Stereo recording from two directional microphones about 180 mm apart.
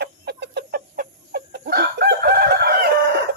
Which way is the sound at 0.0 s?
65° right (ahead or behind).